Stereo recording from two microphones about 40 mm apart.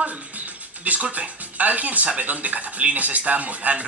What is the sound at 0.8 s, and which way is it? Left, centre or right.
Speech, right.